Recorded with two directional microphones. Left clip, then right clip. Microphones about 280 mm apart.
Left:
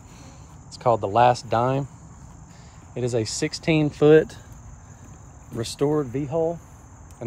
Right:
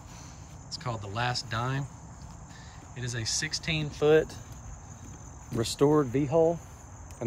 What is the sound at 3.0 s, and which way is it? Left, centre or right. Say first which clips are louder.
Speech: left 8 dB; centre.